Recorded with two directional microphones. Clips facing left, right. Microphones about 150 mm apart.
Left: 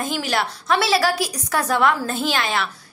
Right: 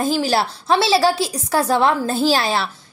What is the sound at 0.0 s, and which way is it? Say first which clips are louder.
A woman's voice: right 5 dB; 30° right (ahead or behind).